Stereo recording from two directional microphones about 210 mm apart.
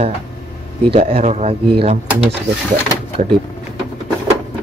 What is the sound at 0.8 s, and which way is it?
Speech, 25° right (ahead or behind).